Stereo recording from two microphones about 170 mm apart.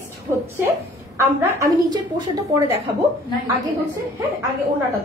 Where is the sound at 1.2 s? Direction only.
20° right (ahead or behind).